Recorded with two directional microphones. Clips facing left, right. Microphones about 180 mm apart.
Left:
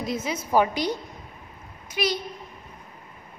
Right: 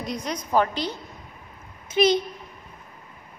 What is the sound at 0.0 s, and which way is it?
Speech, 5° left (ahead or behind).